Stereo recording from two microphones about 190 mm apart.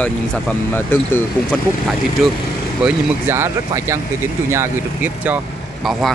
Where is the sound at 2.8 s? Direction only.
15° right (ahead or behind).